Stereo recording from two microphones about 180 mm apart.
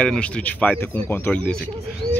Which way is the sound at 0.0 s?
5° left (ahead or behind).